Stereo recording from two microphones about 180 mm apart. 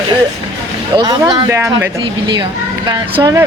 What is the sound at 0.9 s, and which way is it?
Speech, 25° right (ahead or behind).